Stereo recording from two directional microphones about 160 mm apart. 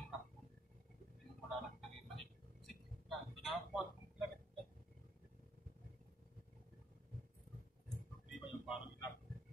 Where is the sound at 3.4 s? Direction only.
Centre (ahead or behind).